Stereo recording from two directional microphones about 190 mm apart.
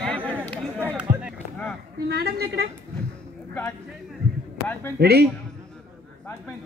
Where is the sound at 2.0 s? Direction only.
55° right (ahead or behind).